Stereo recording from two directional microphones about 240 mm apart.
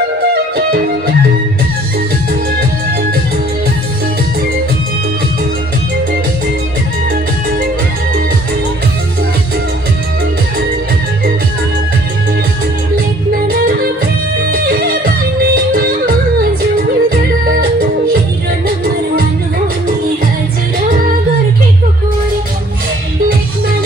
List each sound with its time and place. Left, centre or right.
0.3 s music: right
14.5 s music: right